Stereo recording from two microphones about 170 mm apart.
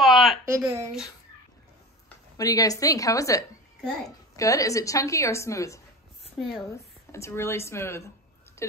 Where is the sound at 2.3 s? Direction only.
20° left (ahead or behind).